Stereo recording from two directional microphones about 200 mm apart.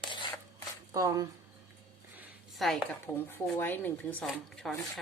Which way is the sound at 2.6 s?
Centre (ahead or behind).